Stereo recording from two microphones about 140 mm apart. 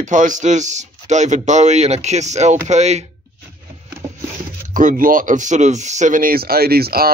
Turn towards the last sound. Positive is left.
turn(degrees=-90)